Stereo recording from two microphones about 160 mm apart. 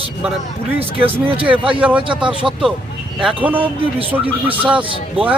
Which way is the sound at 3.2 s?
5° right (ahead or behind).